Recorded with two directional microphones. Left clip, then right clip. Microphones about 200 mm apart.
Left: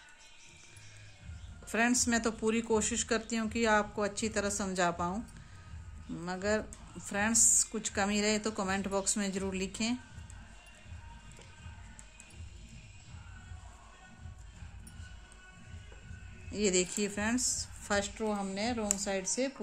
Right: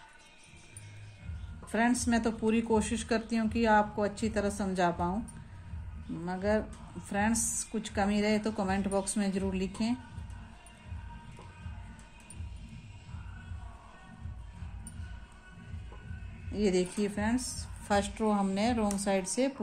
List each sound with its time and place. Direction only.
1.7 s speech: 20° left (ahead or behind)
6.2 s speech: 25° left (ahead or behind)
16.5 s speech: 25° left (ahead or behind)
17.8 s a woman's voice: 5° left (ahead or behind)